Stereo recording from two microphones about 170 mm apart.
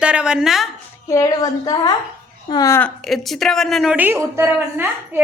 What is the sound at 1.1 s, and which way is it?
A woman's voice, 20° left (ahead or behind).